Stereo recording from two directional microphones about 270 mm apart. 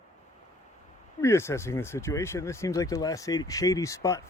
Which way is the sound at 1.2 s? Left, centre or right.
Centre.